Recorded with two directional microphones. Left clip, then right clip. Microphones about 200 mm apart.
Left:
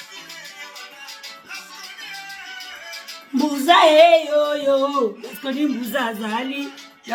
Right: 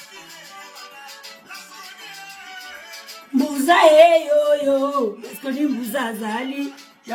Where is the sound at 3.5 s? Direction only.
20° right (ahead or behind).